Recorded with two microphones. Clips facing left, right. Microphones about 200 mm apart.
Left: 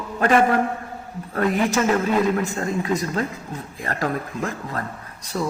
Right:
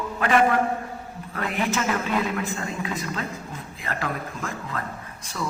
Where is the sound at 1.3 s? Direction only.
45° left (ahead or behind).